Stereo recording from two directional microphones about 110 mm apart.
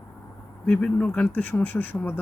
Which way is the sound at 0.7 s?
10° left (ahead or behind).